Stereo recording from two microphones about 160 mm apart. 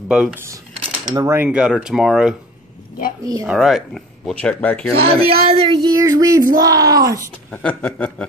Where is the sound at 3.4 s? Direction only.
Centre (ahead or behind).